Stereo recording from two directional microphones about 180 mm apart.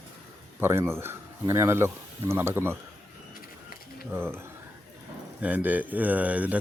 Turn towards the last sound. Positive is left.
turn(degrees=-10)  # may be behind; listen again after turning